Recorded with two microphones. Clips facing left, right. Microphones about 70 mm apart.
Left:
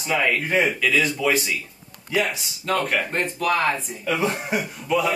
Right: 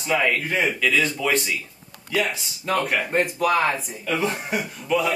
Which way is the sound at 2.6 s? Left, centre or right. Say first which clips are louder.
Even; centre.